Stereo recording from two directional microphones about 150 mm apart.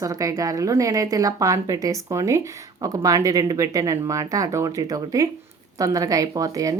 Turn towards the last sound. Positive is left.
turn(degrees=-25)  # may be behind; listen again after turning